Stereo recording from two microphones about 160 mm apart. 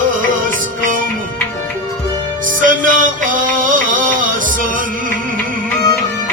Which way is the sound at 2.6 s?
60° right (ahead or behind).